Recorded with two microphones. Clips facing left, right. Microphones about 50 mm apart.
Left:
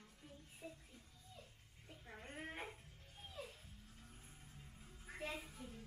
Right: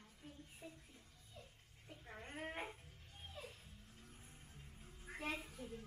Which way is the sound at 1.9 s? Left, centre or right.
Centre.